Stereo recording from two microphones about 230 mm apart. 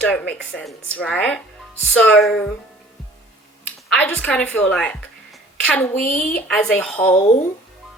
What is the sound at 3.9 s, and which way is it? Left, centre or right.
A woman's voice, centre.